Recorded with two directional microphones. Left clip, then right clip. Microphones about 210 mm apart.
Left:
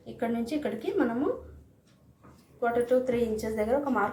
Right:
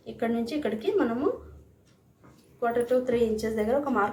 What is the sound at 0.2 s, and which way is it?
Speech, 10° right (ahead or behind).